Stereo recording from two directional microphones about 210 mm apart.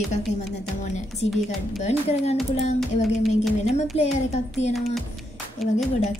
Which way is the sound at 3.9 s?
30° left (ahead or behind).